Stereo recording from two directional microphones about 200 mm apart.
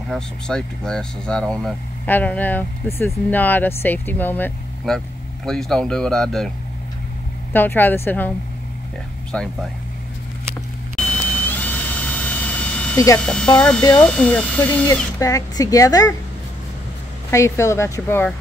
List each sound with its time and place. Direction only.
0.1 s speech: 5° left (ahead or behind)
7.5 s speech: 10° left (ahead or behind)
9.3 s speech: 5° left (ahead or behind)
11.0 s beep: 5° left (ahead or behind)
12.3 s vehicle: 10° left (ahead or behind)
13.2 s speech: 5° left (ahead or behind)
17.3 s speech: 15° left (ahead or behind)